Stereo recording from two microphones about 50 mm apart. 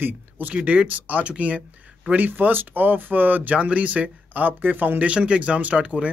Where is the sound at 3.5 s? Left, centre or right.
Right.